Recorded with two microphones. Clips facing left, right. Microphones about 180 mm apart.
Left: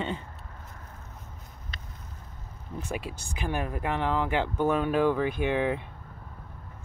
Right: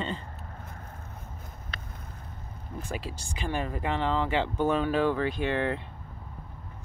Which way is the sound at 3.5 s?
5° left (ahead or behind).